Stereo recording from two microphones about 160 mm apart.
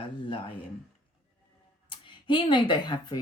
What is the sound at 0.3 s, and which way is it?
Speech, 35° left (ahead or behind).